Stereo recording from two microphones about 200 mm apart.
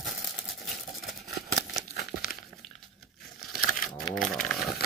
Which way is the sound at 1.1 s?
Centre (ahead or behind).